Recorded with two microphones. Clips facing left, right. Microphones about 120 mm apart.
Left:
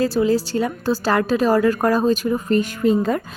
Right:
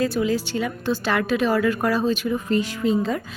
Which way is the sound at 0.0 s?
35° left (ahead or behind).